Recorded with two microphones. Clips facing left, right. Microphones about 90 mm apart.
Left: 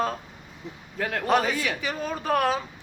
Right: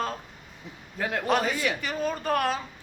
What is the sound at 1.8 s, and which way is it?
Speech, 5° left (ahead or behind).